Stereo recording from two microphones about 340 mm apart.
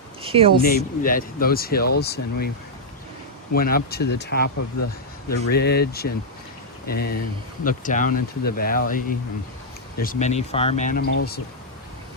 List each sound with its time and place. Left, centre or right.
0.2 s a sound: centre
0.6 s speech: left
3.5 s speech: left